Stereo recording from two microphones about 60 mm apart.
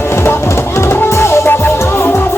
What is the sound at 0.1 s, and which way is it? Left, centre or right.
Music, left.